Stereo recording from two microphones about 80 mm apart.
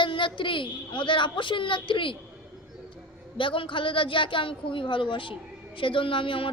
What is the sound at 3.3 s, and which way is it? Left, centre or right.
A woman's voice, left.